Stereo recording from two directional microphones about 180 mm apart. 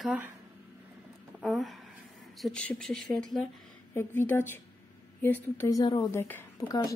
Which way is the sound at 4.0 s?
15° left (ahead or behind).